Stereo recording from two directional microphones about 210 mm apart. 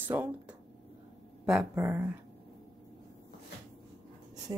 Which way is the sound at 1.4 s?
5° right (ahead or behind).